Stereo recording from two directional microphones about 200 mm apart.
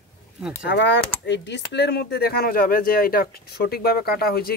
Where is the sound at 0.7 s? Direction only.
60° left (ahead or behind).